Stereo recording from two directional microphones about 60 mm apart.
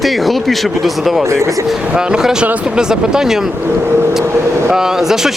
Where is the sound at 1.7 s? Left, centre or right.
Centre.